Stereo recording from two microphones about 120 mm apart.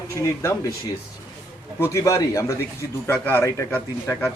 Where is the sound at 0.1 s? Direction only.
25° left (ahead or behind).